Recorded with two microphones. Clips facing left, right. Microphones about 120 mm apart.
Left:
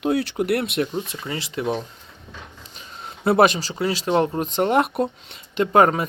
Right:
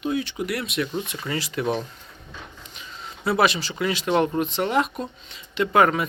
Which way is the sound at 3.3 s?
50° left (ahead or behind).